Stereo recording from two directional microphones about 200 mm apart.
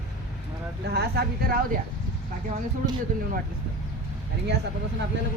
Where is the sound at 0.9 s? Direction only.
55° right (ahead or behind).